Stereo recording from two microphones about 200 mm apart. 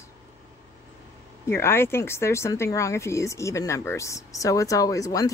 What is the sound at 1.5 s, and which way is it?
Speech, 10° left (ahead or behind).